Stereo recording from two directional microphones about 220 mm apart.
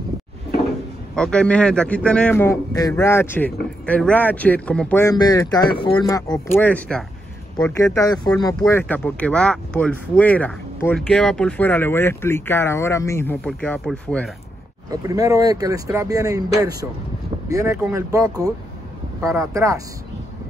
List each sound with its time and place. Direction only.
1.1 s speech: 5° left (ahead or behind)
14.9 s speech: 15° right (ahead or behind)